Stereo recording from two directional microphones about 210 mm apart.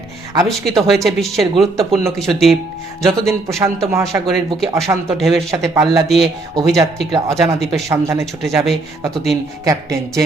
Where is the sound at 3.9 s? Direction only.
15° right (ahead or behind).